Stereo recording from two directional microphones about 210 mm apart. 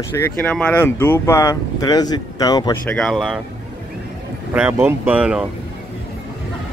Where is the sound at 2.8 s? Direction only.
5° left (ahead or behind).